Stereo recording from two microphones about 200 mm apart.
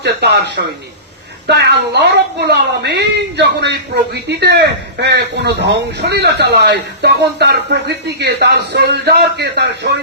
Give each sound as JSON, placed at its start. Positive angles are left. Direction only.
{"t": 0.0, "sound": "a woman's voice", "side_deg": -60}